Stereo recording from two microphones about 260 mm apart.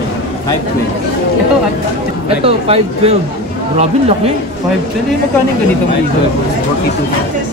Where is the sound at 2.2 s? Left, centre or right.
Right.